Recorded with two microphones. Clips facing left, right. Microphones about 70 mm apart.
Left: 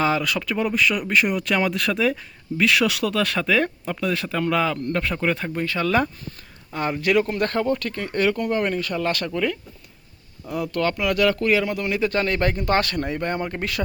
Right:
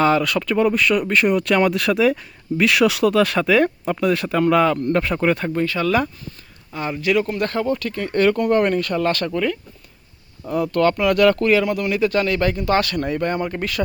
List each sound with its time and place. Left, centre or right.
0.0 s speech: centre
5.6 s speech: left
7.0 s speech: left
8.0 s speech: centre
8.3 s speech: centre
10.4 s speech: right
10.8 s speech: centre
11.4 s speech: centre